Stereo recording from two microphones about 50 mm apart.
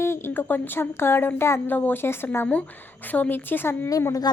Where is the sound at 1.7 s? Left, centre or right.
Left.